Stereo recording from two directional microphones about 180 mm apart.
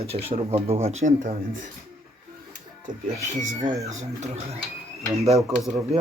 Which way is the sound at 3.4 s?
45° right (ahead or behind).